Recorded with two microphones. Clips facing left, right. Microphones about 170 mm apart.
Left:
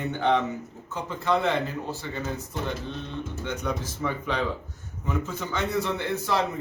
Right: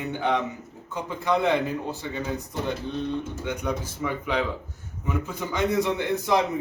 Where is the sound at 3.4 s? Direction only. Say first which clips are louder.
Right 1 dB; 10° right (ahead or behind).